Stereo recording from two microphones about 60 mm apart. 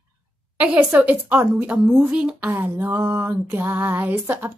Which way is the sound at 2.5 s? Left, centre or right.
Right.